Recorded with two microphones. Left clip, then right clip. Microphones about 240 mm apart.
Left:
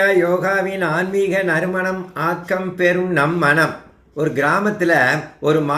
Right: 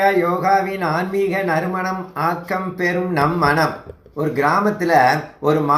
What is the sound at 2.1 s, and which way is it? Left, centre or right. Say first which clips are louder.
Speech: even; right.